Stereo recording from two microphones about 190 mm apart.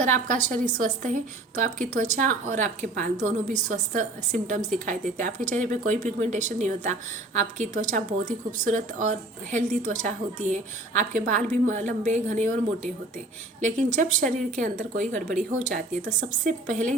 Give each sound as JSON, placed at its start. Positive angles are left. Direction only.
{"t": 0.0, "sound": "a woman's voice", "side_deg": -40}
{"t": 16.4, "sound": "a woman's voice", "side_deg": -40}